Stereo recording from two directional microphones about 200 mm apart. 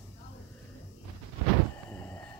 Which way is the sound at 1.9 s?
10° left (ahead or behind).